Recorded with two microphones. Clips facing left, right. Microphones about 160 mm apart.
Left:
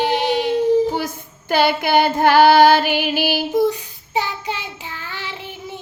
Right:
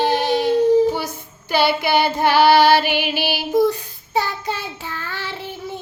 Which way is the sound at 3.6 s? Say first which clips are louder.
Even; 15° left (ahead or behind).